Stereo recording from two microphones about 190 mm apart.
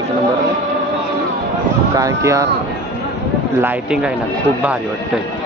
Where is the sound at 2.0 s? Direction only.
15° right (ahead or behind).